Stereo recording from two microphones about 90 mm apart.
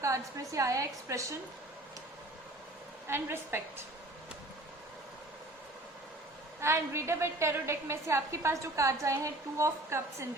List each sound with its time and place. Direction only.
0.0 s a woman's voice: 35° right (ahead or behind)
3.1 s a woman's voice: 25° right (ahead or behind)
6.6 s a woman's voice: 30° right (ahead or behind)